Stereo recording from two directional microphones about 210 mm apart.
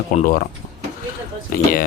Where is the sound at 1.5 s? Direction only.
40° left (ahead or behind).